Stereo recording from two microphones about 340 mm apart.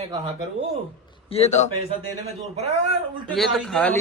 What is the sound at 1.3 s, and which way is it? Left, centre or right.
Speech, centre.